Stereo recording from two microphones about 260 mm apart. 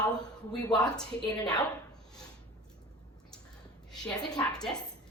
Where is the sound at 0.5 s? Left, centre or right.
Centre.